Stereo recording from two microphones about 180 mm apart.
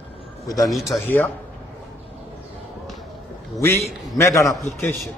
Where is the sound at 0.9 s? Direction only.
10° left (ahead or behind).